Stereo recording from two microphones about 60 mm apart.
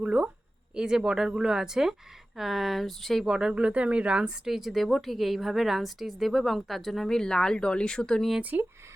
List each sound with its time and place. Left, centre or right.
0.0 s speech: right; by 3.3 s centre
3.5 s speech: right
4.4 s a woman's voice: centre
8.4 s speech: right